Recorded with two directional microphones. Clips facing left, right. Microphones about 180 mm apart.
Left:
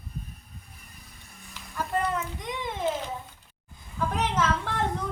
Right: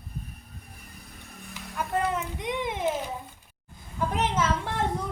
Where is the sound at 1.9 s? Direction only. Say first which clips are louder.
Right 1 dB; 20° right (ahead or behind).